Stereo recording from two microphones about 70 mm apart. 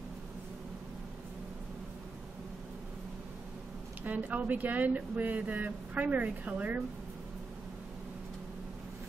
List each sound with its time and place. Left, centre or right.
4.0 s speech: right